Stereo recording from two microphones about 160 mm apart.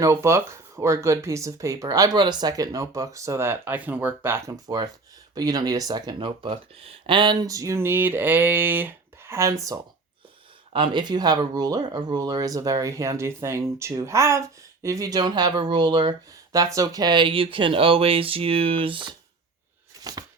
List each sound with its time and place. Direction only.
0.0 s speech: 20° right (ahead or behind)
10.7 s speech: 30° right (ahead or behind)
20.1 s a sound: 25° right (ahead or behind)